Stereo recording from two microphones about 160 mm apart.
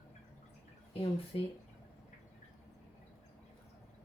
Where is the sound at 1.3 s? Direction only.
35° left (ahead or behind).